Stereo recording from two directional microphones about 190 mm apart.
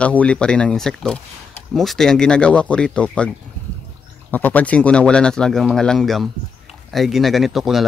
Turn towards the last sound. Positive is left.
turn(degrees=0)  # may be behind; listen again after turning